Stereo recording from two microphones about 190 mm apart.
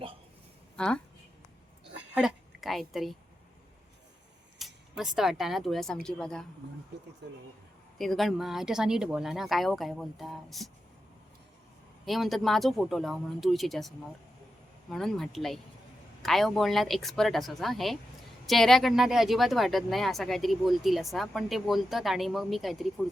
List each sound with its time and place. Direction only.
0.8 s speech: 5° left (ahead or behind)
2.1 s a woman's voice: centre (ahead or behind)
4.5 s speech: centre (ahead or behind)
7.2 s speech: 65° right (ahead or behind)
7.9 s speech: centre (ahead or behind)
12.0 s speech: centre (ahead or behind)